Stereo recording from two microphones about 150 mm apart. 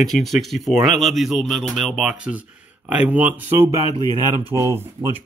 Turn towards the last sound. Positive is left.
turn(degrees=-20)  # may be behind; listen again after turning